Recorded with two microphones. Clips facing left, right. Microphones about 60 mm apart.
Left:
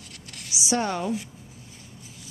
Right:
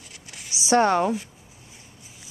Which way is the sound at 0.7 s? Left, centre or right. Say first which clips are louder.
Right 7 dB; right.